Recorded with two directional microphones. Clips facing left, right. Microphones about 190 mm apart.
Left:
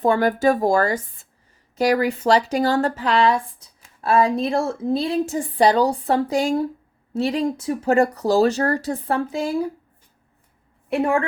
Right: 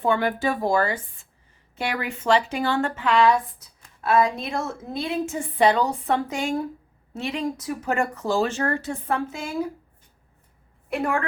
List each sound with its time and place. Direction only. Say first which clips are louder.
0.0 s speech: left 5 dB; 40° left (ahead or behind)
10.8 s a woman's voice: left 5 dB; 30° left (ahead or behind)